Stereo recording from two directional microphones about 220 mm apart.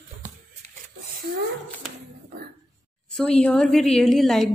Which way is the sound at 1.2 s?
45° right (ahead or behind).